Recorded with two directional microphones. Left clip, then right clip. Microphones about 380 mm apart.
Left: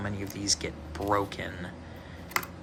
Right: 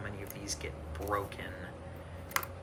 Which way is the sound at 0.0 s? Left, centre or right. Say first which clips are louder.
Left 8 dB; centre.